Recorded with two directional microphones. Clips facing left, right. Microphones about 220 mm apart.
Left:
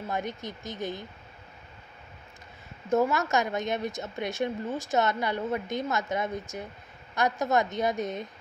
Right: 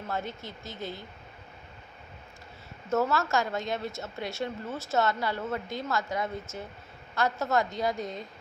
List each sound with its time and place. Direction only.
0.1 s a woman's voice: 15° left (ahead or behind)
2.9 s a woman's voice: 15° left (ahead or behind)